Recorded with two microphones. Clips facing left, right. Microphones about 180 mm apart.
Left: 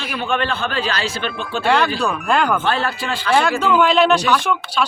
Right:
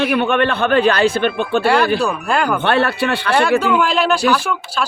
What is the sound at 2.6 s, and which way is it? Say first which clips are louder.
Speech: right 5 dB; 65° right (ahead or behind).